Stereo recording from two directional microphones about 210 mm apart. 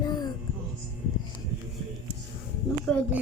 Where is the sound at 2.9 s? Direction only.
5° left (ahead or behind).